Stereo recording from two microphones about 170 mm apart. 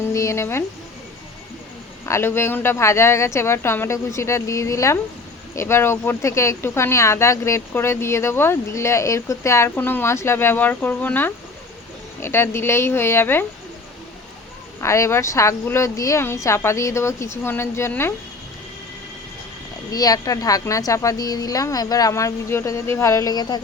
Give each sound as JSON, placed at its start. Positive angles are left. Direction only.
{"t": 0.1, "sound": "music", "side_deg": 15}
{"t": 2.0, "sound": "speech", "side_deg": 15}
{"t": 14.8, "sound": "speech", "side_deg": 15}
{"t": 19.9, "sound": "a woman's voice", "side_deg": 20}